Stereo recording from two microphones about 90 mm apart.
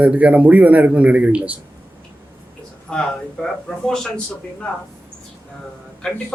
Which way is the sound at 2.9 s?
5° left (ahead or behind).